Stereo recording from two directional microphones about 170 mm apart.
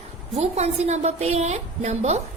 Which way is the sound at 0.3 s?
40° right (ahead or behind).